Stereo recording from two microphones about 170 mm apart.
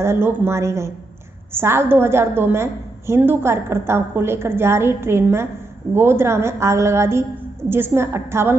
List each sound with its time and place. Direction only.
0.0 s a woman's voice: 15° right (ahead or behind)